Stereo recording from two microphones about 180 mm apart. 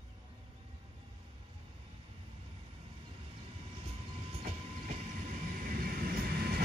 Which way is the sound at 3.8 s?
35° right (ahead or behind).